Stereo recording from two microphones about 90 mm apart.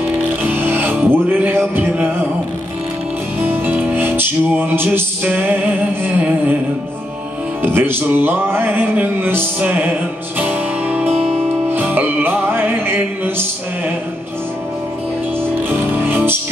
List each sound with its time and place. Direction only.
0.4 s music: 20° right (ahead or behind)
3.3 s music: 25° right (ahead or behind)
7.6 s music: 25° right (ahead or behind)
15.9 s music: 20° right (ahead or behind)